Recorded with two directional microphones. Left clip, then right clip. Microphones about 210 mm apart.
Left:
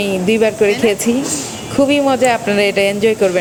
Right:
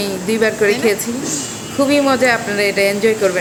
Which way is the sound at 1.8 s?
30° left (ahead or behind).